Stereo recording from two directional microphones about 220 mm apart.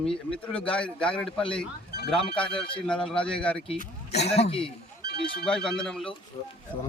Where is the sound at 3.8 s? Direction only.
30° left (ahead or behind).